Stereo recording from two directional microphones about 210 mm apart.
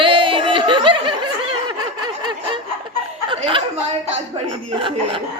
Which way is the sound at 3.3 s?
25° right (ahead or behind).